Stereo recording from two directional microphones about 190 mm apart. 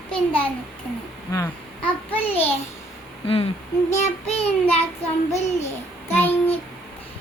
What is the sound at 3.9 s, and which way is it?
Child singing, 35° left (ahead or behind).